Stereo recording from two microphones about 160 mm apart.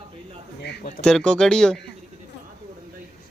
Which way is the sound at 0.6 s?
90° left.